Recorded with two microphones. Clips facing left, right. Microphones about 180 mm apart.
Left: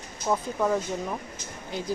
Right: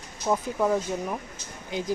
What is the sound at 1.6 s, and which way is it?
Speech, 15° right (ahead or behind).